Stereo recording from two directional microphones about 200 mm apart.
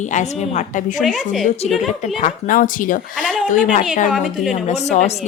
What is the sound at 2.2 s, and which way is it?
Speech, 40° left (ahead or behind).